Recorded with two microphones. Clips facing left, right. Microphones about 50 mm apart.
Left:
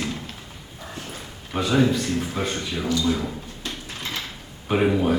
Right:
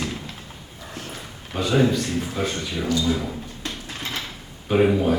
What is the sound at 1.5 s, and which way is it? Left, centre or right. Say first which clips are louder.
Speech: even; centre.